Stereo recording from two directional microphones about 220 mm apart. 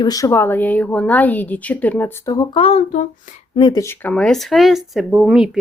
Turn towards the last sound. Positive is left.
turn(degrees=-5)  # may be behind; listen again after turning